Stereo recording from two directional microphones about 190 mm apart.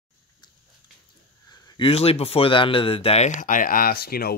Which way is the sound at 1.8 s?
30° left (ahead or behind).